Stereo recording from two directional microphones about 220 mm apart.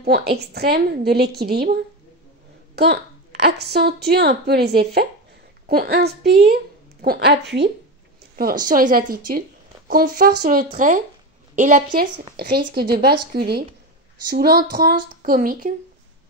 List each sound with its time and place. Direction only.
0.0 s a woman's voice: 45° right (ahead or behind)